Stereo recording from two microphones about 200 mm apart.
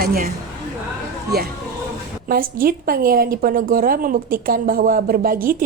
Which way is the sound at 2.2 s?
45° right (ahead or behind).